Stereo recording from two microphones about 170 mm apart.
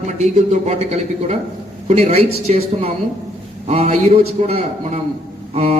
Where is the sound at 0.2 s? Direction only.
40° right (ahead or behind).